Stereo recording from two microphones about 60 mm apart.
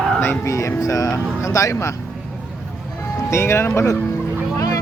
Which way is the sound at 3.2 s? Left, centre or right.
Left.